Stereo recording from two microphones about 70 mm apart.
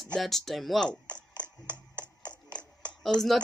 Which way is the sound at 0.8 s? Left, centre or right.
Centre.